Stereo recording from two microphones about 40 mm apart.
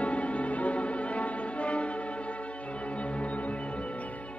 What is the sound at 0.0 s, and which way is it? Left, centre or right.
Music, left.